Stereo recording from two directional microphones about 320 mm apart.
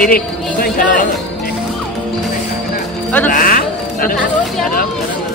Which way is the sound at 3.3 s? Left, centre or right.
Left.